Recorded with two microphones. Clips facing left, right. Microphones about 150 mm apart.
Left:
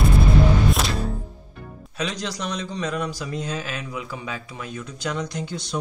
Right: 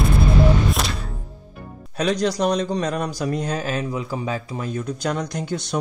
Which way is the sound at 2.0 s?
50° right (ahead or behind).